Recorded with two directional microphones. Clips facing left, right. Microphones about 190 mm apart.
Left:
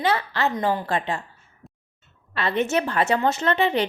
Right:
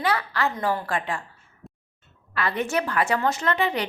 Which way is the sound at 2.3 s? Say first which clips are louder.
Left 3 dB; 25° left (ahead or behind).